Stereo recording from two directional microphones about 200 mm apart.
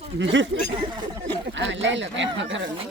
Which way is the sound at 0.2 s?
70° right (ahead or behind).